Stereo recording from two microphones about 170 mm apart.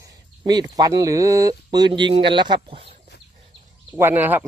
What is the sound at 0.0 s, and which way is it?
Speech, 25° right (ahead or behind).